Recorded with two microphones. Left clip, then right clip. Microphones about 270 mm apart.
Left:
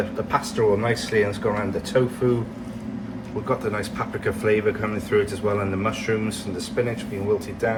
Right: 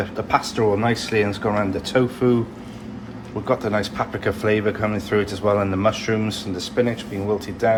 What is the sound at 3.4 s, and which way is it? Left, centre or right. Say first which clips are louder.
Speech: right 4 dB; right.